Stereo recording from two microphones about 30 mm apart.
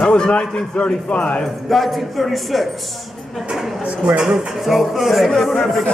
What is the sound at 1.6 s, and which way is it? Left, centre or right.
A woman's voice, centre.